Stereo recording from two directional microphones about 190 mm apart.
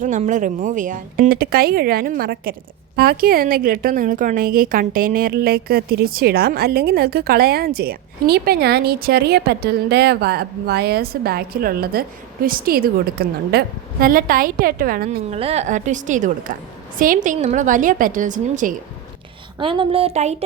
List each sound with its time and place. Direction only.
0.0 s speech: 40° right (ahead or behind)
15.3 s a woman's voice: 35° right (ahead or behind)
19.5 s speech: 25° right (ahead or behind)